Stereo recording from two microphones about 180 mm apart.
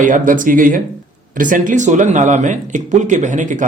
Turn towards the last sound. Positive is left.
turn(degrees=-45)  # may be behind; listen again after turning